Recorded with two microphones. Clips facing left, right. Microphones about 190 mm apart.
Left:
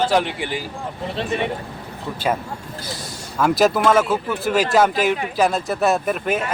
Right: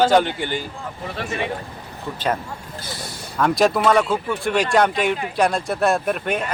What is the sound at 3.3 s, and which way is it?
Speech, 5° left (ahead or behind).